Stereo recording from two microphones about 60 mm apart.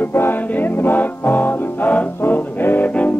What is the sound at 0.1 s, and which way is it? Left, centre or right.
Music, left.